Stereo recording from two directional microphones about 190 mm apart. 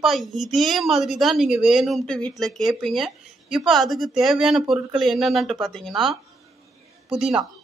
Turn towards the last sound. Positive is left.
turn(degrees=-5)  # may be behind; listen again after turning